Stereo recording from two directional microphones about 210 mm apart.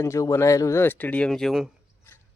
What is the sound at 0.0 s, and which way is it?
Speech, 15° left (ahead or behind).